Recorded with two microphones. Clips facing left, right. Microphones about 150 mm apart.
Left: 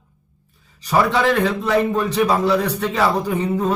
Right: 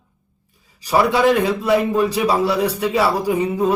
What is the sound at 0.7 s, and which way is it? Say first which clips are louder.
A man's voice: right 1 dB; 10° right (ahead or behind).